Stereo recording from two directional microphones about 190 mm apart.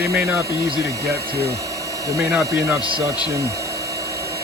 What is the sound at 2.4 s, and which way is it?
Speech, 15° right (ahead or behind).